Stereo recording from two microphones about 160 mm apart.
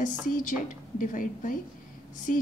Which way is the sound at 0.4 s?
55° left (ahead or behind).